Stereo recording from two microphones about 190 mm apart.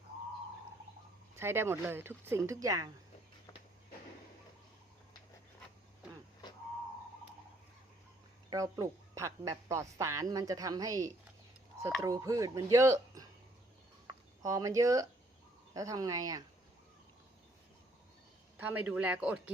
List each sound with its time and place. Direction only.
1.4 s a woman's voice: 15° right (ahead or behind)
8.4 s a woman's voice: 15° right (ahead or behind)
18.5 s a woman's voice: 10° right (ahead or behind)